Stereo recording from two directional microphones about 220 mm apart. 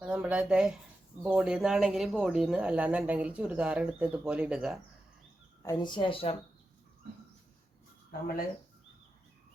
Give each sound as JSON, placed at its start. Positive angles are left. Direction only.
{"t": 0.0, "sound": "speech", "side_deg": -5}
{"t": 5.6, "sound": "speech", "side_deg": 20}